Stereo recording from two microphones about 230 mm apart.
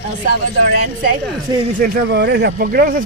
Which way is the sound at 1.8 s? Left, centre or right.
Right.